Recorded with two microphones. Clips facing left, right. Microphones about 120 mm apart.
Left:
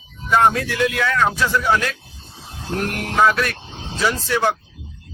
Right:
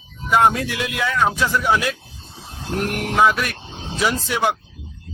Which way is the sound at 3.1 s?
10° right (ahead or behind).